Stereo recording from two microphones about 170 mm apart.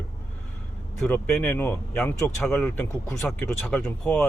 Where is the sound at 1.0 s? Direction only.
5° left (ahead or behind).